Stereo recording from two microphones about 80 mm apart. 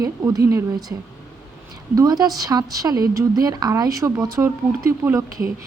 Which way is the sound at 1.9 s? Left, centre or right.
Right.